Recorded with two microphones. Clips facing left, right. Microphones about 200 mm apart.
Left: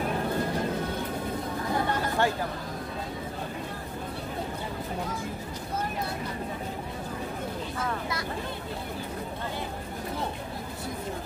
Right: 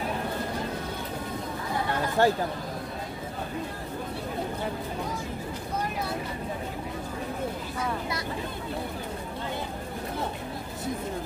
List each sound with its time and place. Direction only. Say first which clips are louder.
2.2 s chatter: right 5 dB; 40° right (ahead or behind)